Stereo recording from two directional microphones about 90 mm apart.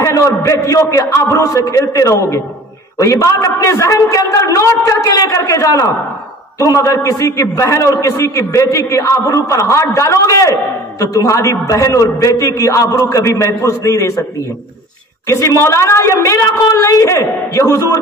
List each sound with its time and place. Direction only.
0.0 s a man's voice: 35° left (ahead or behind)
15.2 s a man's voice: 35° left (ahead or behind)